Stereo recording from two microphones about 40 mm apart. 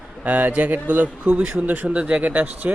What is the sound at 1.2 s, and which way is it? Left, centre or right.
Speech, right.